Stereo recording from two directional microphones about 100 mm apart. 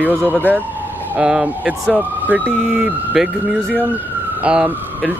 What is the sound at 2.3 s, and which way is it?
Speech, 15° right (ahead or behind).